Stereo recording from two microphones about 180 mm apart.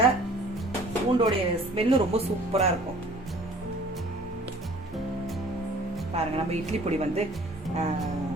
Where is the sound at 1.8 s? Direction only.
35° right (ahead or behind).